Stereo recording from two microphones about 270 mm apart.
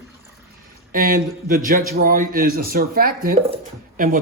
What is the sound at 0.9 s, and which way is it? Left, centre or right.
A man's voice, right.